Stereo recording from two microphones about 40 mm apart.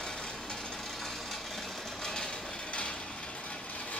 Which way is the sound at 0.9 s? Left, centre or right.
Centre.